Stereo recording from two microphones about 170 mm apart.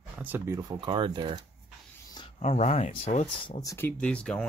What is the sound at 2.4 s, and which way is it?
Speech, 40° left (ahead or behind).